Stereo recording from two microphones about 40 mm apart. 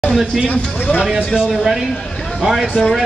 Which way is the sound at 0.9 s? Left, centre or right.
Left.